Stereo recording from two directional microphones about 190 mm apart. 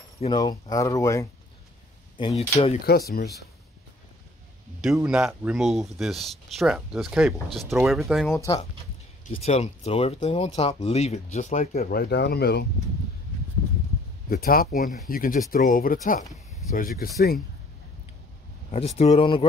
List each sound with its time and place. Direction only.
0.2 s speech: 25° left (ahead or behind)
2.1 s speech: 30° left (ahead or behind)
3.1 s speech: 55° left (ahead or behind)
4.8 s speech: 5° right (ahead or behind)
9.3 s speech: 35° left (ahead or behind); by 12.6 s 60° left (ahead or behind)
14.3 s speech: 50° left (ahead or behind)
18.9 s speech: 30° left (ahead or behind)